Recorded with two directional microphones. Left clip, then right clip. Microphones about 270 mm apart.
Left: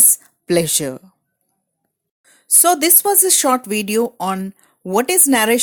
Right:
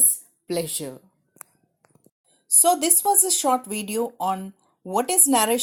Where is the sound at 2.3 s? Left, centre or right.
Left.